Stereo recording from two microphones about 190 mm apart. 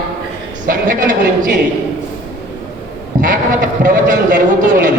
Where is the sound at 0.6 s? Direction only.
45° right (ahead or behind).